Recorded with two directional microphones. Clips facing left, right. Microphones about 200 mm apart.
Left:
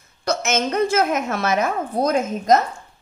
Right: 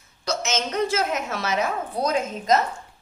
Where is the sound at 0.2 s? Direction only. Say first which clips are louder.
Left 5 dB; 55° left (ahead or behind).